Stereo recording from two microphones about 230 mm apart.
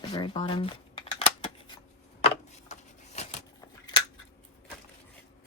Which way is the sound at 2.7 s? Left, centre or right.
Left.